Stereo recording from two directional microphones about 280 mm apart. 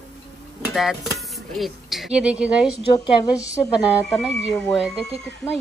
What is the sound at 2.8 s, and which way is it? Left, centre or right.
Speech, centre.